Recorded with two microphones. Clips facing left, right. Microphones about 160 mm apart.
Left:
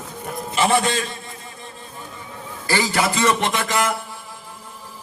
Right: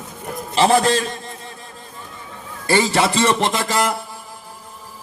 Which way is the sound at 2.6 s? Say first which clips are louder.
Right 4 dB; 25° right (ahead or behind).